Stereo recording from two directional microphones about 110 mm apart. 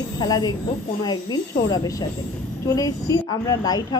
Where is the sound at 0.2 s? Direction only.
40° left (ahead or behind).